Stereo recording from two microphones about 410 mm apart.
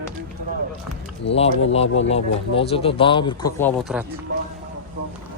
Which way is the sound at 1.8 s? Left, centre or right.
Left.